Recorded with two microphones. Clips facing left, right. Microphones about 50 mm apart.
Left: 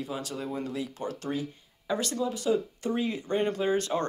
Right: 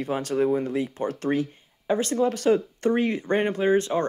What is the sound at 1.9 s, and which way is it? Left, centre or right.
Speech, right.